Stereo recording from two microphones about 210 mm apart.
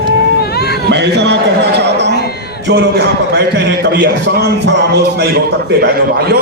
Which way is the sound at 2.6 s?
55° right (ahead or behind).